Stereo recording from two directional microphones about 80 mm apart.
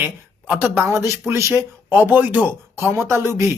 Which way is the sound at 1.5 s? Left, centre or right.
Right.